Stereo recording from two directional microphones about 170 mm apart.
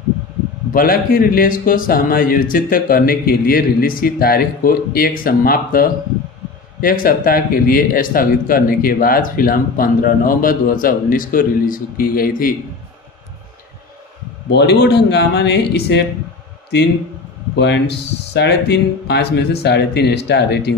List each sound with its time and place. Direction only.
0.7 s a man's voice: 60° left (ahead or behind)
14.5 s speech: 80° left
17.6 s speech: 90° left